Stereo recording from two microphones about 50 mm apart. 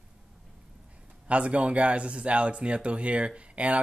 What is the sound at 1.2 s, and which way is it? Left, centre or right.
Speech, right.